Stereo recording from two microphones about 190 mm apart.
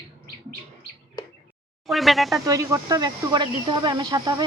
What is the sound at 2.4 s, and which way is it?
Speech, 15° right (ahead or behind).